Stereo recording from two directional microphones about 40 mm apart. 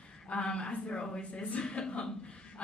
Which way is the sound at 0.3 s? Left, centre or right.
Left.